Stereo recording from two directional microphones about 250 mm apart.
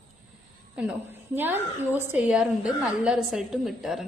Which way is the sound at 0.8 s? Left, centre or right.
Centre.